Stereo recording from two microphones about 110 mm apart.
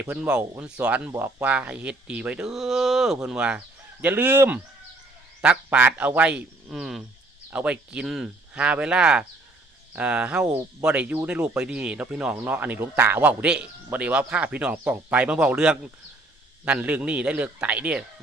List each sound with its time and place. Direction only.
0.0 s speech: 15° right (ahead or behind)